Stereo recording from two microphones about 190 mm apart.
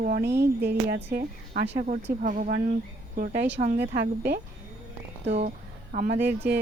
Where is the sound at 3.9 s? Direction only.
60° right (ahead or behind).